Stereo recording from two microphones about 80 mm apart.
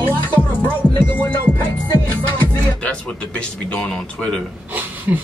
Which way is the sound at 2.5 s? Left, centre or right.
Centre.